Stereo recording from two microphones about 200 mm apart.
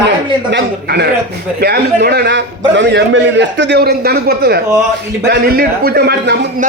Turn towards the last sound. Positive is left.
turn(degrees=-50)  # may be behind; listen again after turning